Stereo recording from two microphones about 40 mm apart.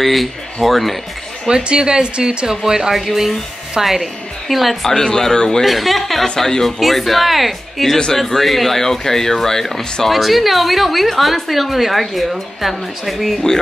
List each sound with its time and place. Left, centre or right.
0.0 s a woman's voice: centre
1.5 s a woman's voice: right; by 4.7 s centre
4.8 s speech: centre
5.7 s speech: centre
6.2 s speech: centre
6.8 s a woman's voice: centre